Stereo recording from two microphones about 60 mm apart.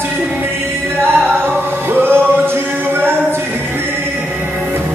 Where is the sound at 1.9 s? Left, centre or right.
Right.